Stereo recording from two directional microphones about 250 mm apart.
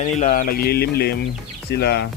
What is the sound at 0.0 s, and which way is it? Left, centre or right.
Speech, left.